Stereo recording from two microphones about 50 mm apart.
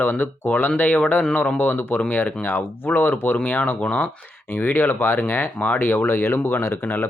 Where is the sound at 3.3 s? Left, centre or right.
Left.